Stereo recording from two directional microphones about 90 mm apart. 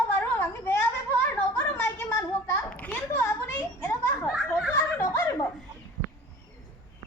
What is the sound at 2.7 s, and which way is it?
A child's voice, 15° left (ahead or behind).